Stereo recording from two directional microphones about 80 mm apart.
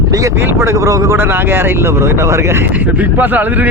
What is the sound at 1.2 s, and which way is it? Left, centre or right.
A man's voice, right.